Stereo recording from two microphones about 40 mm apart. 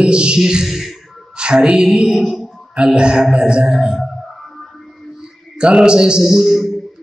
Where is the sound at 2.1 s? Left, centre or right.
Centre.